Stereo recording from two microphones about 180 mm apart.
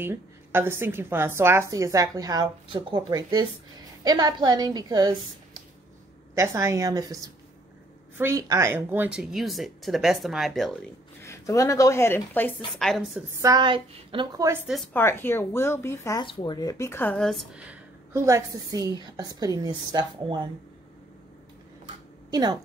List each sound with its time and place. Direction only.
0.0 s a woman's voice: 10° right (ahead or behind)
11.2 s a woman's voice: 15° left (ahead or behind); by 13.2 s centre (ahead or behind)
13.4 s a woman's voice: 20° right (ahead or behind)
14.9 s a woman's voice: 10° left (ahead or behind)
16.3 s speech: 25° left (ahead or behind); by 20.4 s 20° right (ahead or behind)
22.3 s speech: 20° right (ahead or behind)